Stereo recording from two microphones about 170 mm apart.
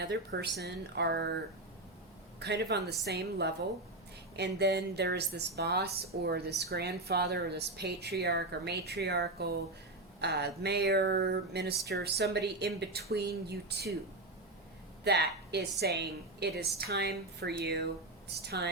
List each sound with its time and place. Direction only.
0.0 s a woman's voice: 75° right (ahead or behind)
2.4 s a woman's voice: 80° right
15.0 s a woman's voice: 75° right (ahead or behind)